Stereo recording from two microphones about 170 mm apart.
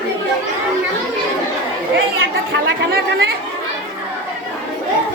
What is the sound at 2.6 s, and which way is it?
Chatter, 65° right (ahead or behind).